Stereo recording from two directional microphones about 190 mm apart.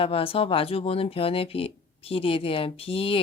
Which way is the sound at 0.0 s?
30° left (ahead or behind).